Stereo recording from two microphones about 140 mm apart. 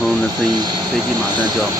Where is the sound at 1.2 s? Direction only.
30° right (ahead or behind).